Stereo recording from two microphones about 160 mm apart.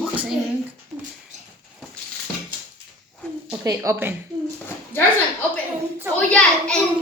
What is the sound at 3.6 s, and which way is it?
Speech, 20° right (ahead or behind).